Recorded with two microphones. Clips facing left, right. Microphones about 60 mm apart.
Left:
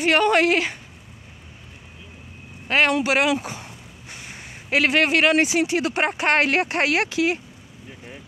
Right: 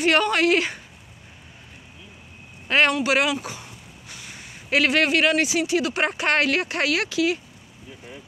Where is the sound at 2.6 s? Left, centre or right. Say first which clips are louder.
Even; centre.